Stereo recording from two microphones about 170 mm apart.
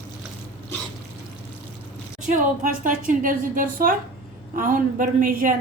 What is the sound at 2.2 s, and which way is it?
A woman's voice, 50° right (ahead or behind).